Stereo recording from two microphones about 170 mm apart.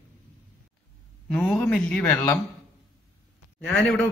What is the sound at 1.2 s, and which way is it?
Speech, 5° left (ahead or behind).